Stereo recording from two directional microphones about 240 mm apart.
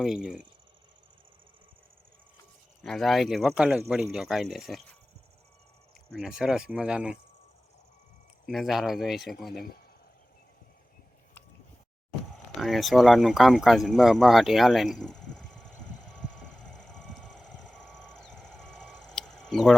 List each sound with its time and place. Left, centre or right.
0.0 s speech: centre
2.8 s speech: centre
6.1 s speech: centre
8.4 s speech: centre
9.5 s speech: left
12.5 s speech: centre
16.7 s a sound: centre